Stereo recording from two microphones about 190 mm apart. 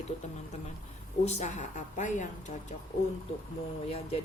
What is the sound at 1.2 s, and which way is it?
Speech, 35° left (ahead or behind).